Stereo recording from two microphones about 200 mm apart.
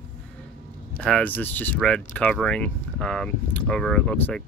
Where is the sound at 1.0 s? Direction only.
5° left (ahead or behind).